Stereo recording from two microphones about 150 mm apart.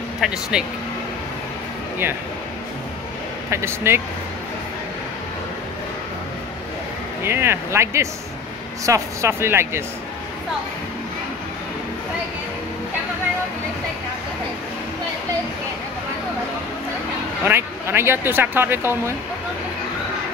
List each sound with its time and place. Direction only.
0.2 s speech: 5° right (ahead or behind)
3.4 s speech: 20° right (ahead or behind)
7.2 s speech: 15° right (ahead or behind)
17.5 s speech: 15° right (ahead or behind)